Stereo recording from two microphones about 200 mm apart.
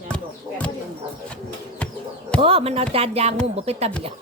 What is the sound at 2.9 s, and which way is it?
Speech, 30° right (ahead or behind).